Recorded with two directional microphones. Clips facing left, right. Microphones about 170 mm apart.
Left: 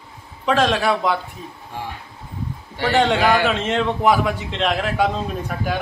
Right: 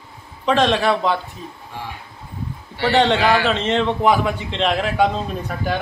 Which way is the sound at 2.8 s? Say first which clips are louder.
Right 1 dB; 10° left (ahead or behind).